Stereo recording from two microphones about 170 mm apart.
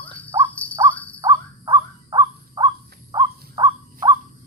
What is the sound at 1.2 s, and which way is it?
Crow, 25° right (ahead or behind).